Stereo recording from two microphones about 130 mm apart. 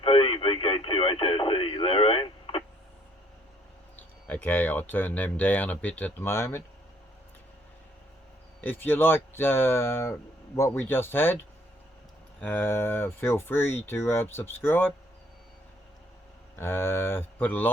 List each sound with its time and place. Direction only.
0.0 s radio: 45° left (ahead or behind)
4.3 s speech: 15° left (ahead or behind)
8.6 s speech: 15° left (ahead or behind)
12.4 s speech: 15° left (ahead or behind)
16.6 s speech: 20° left (ahead or behind)